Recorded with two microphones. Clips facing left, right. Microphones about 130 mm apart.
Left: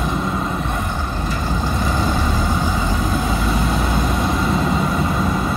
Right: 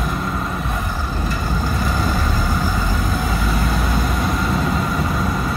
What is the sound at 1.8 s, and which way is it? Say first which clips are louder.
Vehicle: left 2 dB; centre (ahead or behind).